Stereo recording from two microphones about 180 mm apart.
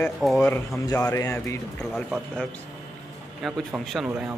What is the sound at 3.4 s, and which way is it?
Speech, centre (ahead or behind).